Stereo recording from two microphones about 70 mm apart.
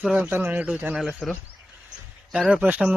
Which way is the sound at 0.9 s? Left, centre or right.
Centre.